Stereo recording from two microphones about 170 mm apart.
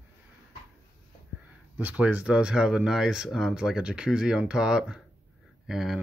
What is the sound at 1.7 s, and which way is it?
Speech, 10° right (ahead or behind).